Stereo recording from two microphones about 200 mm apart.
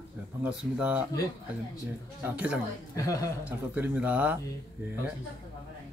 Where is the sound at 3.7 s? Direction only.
5° right (ahead or behind).